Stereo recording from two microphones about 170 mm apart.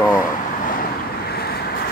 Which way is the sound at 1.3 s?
65° left (ahead or behind).